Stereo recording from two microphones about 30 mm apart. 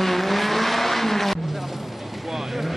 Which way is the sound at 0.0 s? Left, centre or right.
Centre.